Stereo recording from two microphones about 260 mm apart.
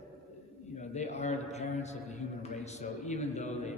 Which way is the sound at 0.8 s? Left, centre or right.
Left.